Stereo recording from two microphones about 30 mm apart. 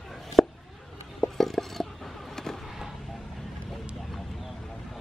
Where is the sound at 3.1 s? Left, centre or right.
Centre.